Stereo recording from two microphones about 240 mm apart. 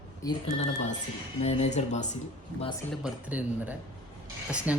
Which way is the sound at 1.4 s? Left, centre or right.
Left.